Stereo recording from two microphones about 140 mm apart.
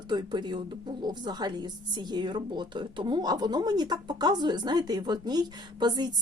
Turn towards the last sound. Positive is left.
turn(degrees=-30)  # may be behind; listen again after turning